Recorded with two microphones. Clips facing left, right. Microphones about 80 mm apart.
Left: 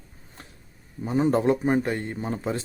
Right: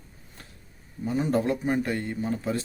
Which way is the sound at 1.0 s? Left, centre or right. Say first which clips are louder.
Left 4 dB; left.